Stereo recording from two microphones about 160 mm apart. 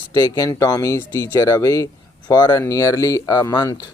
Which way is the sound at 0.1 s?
20° left (ahead or behind).